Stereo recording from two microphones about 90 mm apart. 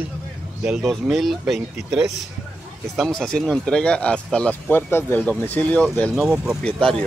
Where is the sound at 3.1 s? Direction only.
5° left (ahead or behind).